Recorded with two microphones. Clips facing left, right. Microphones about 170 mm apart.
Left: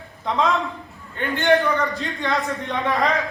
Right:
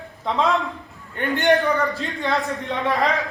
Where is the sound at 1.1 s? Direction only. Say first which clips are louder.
Right 2 dB; 15° right (ahead or behind).